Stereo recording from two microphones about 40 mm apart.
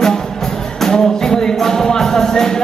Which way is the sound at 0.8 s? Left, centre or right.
Centre.